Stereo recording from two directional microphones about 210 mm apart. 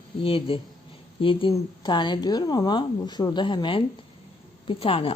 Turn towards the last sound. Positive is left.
turn(degrees=25)  # may be behind; listen again after turning